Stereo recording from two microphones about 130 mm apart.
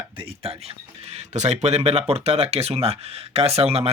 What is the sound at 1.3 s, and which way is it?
Speech, 60° right (ahead or behind).